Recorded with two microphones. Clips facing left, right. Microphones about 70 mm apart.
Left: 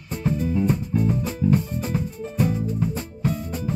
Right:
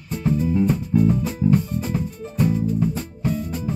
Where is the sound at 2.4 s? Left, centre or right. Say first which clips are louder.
Right 3 dB; centre.